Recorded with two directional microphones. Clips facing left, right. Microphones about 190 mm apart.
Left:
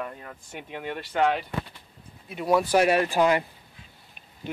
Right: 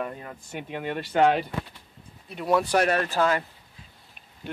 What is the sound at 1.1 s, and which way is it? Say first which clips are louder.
Speech: right 3 dB; 30° right (ahead or behind).